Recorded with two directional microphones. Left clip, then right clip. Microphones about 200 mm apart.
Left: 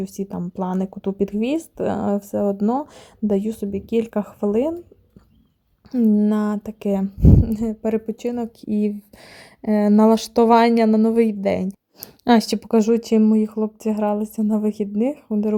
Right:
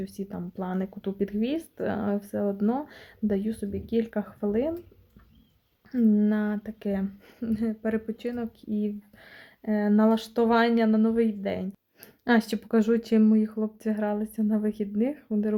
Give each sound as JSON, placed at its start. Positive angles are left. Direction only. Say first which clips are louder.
{"t": 0.0, "sound": "speech", "louder": "left 8 dB", "side_deg": 30}
{"t": 5.9, "sound": "speech", "louder": "left 6 dB", "side_deg": 25}
{"t": 8.6, "sound": "speech", "louder": "left 8 dB", "side_deg": 40}
{"t": 12.7, "sound": "speech", "louder": "left 6 dB", "side_deg": 25}